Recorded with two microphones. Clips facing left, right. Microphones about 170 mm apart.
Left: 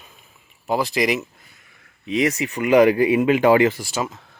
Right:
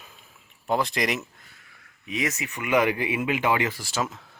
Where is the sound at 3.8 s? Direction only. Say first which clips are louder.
Left 3 dB; 15° left (ahead or behind).